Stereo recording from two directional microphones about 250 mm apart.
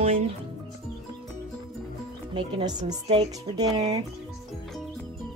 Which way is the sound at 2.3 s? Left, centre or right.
Centre.